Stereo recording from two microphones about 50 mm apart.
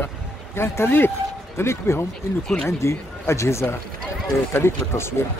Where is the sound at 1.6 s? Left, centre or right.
Left.